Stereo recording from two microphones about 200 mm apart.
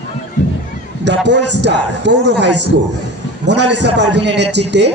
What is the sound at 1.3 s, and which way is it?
A man's voice, 60° right (ahead or behind).